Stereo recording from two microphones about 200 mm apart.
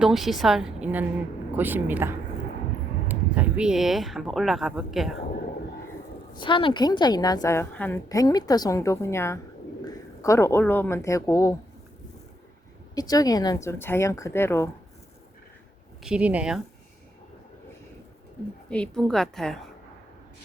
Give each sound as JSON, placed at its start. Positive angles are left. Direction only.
{"t": 0.0, "sound": "speech", "side_deg": 0}
{"t": 6.3, "sound": "a woman's voice", "side_deg": 25}
{"t": 12.9, "sound": "speech", "side_deg": 20}
{"t": 16.0, "sound": "speech", "side_deg": -5}
{"t": 18.7, "sound": "speech", "side_deg": 5}